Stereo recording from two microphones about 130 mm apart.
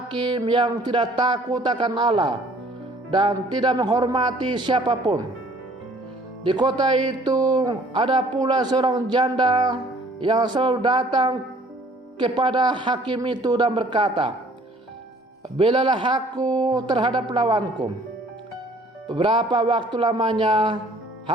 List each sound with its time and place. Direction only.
0.1 s speech: 35° right (ahead or behind)
6.4 s speech: 35° right (ahead or behind)
15.5 s speech: 40° right (ahead or behind)
19.1 s speech: 40° right (ahead or behind)